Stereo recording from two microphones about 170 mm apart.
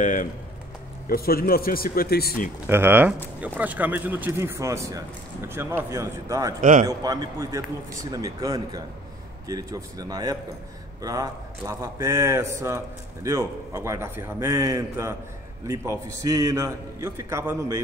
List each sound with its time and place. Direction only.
0.0 s speech: 50° left (ahead or behind)
1.0 s speech: 60° left (ahead or behind)
2.6 s a man's voice: 15° right (ahead or behind)
6.6 s a man's voice: 50° right (ahead or behind)
6.9 s a man's voice: 20° right (ahead or behind)